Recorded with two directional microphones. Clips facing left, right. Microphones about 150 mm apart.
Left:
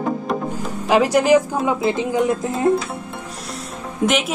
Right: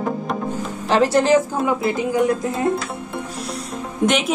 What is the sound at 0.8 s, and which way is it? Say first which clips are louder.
Speech: left 1 dB; 10° left (ahead or behind).